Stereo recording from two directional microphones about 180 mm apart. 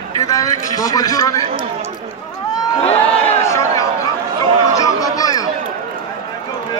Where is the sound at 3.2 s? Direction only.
15° left (ahead or behind).